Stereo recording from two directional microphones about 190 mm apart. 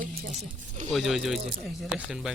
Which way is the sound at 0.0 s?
45° right (ahead or behind).